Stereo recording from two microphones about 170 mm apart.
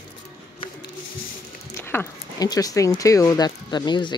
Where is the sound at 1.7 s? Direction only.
15° left (ahead or behind).